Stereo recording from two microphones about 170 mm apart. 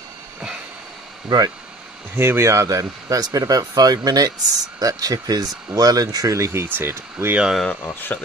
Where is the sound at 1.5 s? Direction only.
5° right (ahead or behind).